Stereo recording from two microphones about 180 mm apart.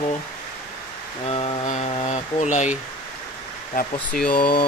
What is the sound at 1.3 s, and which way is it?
Speech, 35° left (ahead or behind).